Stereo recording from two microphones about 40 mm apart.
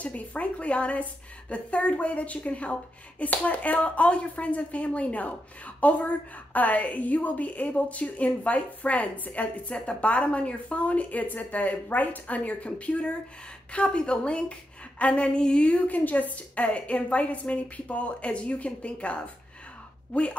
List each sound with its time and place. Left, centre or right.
0.0 s a woman's voice: left
9.8 s a woman's voice: left
16.0 s a woman's voice: left